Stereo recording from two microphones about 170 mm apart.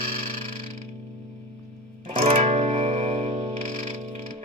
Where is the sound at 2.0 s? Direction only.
40° right (ahead or behind).